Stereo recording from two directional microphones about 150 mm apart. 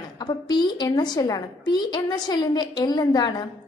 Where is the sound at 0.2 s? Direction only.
30° left (ahead or behind).